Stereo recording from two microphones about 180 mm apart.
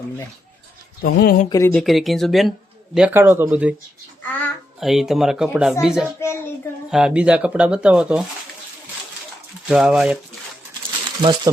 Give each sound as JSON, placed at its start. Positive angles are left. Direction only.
{"t": 1.0, "sound": "speech", "side_deg": 60}
{"t": 1.5, "sound": "a child's voice", "side_deg": 15}
{"t": 1.7, "sound": "speech", "side_deg": 0}
{"t": 4.3, "sound": "a child's voice", "side_deg": 10}
{"t": 4.8, "sound": "speech", "side_deg": 0}
{"t": 6.1, "sound": "a child's voice", "side_deg": 15}
{"t": 6.9, "sound": "speech", "side_deg": -5}
{"t": 9.6, "sound": "speech", "side_deg": -5}
{"t": 11.2, "sound": "speech", "side_deg": -25}